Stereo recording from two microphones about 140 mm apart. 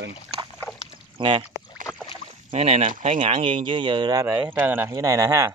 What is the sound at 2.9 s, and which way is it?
Speech, 60° right (ahead or behind).